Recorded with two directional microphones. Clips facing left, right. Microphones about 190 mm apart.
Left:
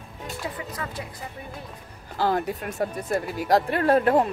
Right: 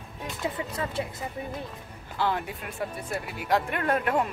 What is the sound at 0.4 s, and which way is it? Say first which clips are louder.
Speech: right 3 dB; 25° right (ahead or behind).